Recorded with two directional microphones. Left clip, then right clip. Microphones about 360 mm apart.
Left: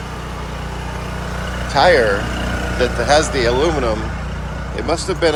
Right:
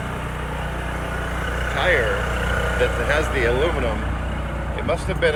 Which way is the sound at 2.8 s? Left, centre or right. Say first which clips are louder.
Left 8 dB; centre.